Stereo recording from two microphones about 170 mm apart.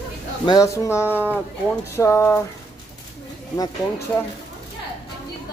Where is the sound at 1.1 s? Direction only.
10° right (ahead or behind).